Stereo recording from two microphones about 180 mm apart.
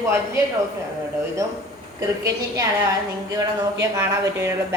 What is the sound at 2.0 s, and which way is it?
A woman's voice, 20° right (ahead or behind).